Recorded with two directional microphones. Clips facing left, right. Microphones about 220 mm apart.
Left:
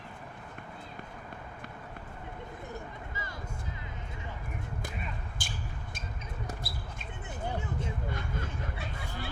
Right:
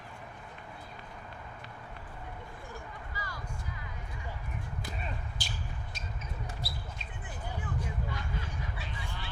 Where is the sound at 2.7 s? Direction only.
25° left (ahead or behind).